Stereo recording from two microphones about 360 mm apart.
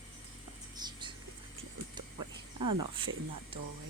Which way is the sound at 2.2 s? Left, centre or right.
Right.